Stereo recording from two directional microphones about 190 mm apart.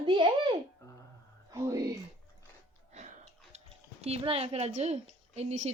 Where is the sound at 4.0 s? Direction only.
30° right (ahead or behind).